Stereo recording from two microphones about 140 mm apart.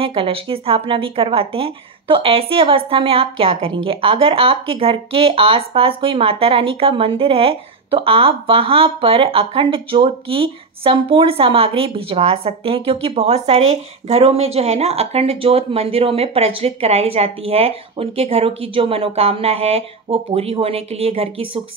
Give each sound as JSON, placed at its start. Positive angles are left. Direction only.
{"t": 0.0, "sound": "speech", "side_deg": -40}